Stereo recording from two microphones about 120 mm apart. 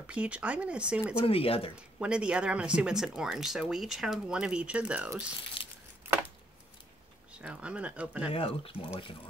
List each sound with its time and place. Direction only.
0.0 s speech: 10° right (ahead or behind)
1.2 s speech: 50° left (ahead or behind)
1.8 s speech: 10° right (ahead or behind)
7.4 s speech: 10° right (ahead or behind)
8.3 s speech: 50° left (ahead or behind)